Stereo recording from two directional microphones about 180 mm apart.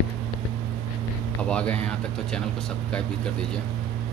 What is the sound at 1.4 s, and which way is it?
Speech, 5° left (ahead or behind).